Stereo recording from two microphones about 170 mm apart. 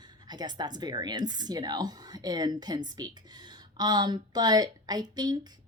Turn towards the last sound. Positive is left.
turn(degrees=-25)  # may be behind; listen again after turning